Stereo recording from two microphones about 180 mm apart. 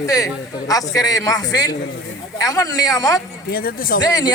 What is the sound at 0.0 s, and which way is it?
A man's voice, 20° left (ahead or behind).